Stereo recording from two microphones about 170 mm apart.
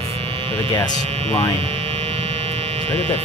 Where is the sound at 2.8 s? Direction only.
35° right (ahead or behind).